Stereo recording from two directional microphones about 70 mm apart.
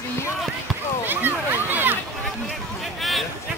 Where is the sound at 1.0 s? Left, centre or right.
Right.